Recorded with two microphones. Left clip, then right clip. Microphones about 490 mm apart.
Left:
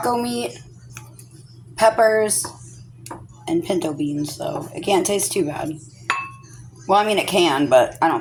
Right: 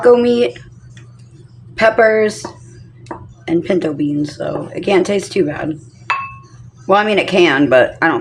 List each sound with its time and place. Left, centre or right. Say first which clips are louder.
0.0 s speech: right 12 dB; left
1.7 s speech: right 4 dB; left
3.4 s speech: right 6 dB; left
6.8 s speech: right 5 dB; left